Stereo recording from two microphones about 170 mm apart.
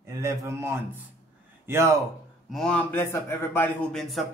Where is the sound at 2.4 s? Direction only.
Centre (ahead or behind).